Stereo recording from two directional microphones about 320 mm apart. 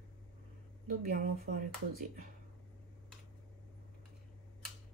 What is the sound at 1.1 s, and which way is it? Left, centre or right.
Speech, right.